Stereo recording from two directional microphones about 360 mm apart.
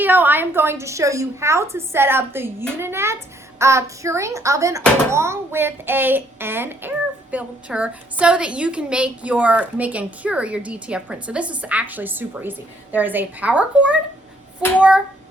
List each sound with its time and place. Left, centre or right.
0.0 s a woman's voice: centre